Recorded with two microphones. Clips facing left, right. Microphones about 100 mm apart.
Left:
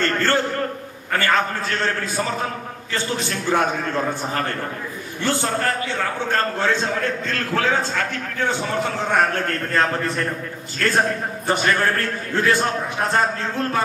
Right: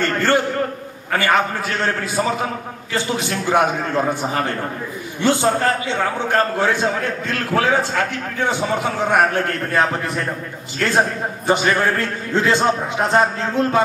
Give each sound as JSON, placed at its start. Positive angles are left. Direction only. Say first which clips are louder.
{"t": 0.0, "sound": "a man's voice", "louder": "right 2 dB", "side_deg": -15}